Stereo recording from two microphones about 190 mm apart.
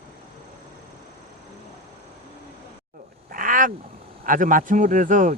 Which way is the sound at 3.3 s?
45° right (ahead or behind).